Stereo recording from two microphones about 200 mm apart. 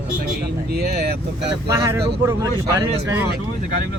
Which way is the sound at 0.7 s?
55° right (ahead or behind).